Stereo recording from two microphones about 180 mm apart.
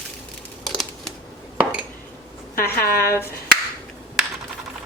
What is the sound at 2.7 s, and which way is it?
Speech, 55° left (ahead or behind).